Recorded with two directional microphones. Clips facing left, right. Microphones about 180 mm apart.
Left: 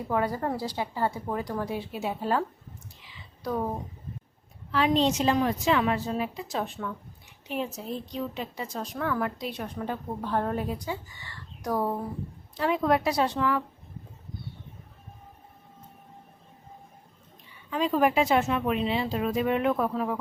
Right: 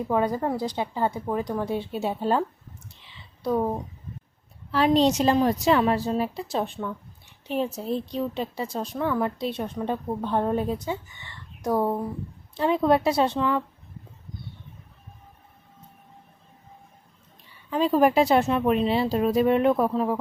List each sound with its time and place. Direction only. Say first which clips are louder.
0.1 s speech: right 3 dB; 20° right (ahead or behind)
3.0 s whispering: right 5 dB; 30° right (ahead or behind)
4.7 s speech: right 4 dB; 40° right (ahead or behind)
17.7 s speech: right 4 dB; 35° right (ahead or behind)